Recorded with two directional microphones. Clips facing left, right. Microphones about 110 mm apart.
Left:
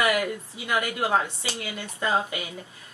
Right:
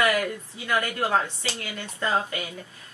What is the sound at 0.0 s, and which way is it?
Speech, 15° left (ahead or behind).